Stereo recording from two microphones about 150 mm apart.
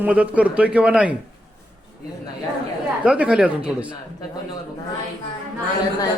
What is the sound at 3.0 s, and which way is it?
Speech, 5° right (ahead or behind).